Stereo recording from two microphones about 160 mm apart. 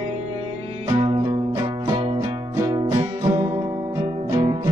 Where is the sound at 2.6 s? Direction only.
20° right (ahead or behind).